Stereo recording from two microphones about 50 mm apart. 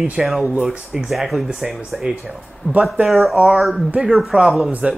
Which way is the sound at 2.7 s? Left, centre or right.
Left.